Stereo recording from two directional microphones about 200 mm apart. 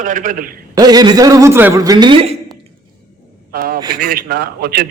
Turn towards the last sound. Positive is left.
turn(degrees=-50)  # may be behind; listen again after turning